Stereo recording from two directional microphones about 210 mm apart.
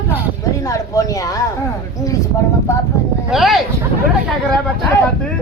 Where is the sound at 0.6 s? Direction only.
15° left (ahead or behind).